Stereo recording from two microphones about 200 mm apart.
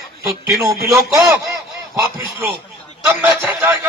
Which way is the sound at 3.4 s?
Centre (ahead or behind).